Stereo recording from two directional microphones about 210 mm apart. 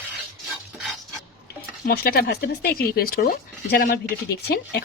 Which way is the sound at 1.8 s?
45° left (ahead or behind).